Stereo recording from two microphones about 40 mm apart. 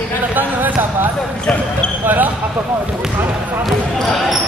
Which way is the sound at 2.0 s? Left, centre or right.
Right.